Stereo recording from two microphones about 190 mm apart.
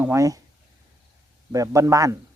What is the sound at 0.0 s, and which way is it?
Speech, 15° right (ahead or behind).